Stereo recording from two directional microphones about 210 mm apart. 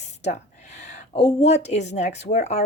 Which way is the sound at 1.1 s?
30° left (ahead or behind).